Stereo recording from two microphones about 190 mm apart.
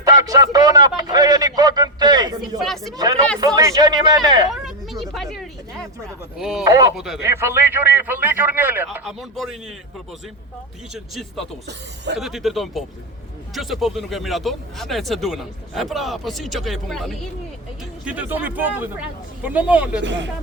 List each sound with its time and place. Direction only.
0.0 s a man's voice: 20° right (ahead or behind)
2.6 s speech: centre (ahead or behind)
3.0 s a man's voice: 20° right (ahead or behind)
4.5 s a sound: centre (ahead or behind)
6.3 s speech: centre (ahead or behind)
6.7 s speech: 15° right (ahead or behind)
6.9 s speech: centre (ahead or behind)
7.2 s speech: 15° right (ahead or behind)
9.0 s speech: centre (ahead or behind)
10.9 s speech: centre (ahead or behind)
20.0 s speech: 70° right (ahead or behind)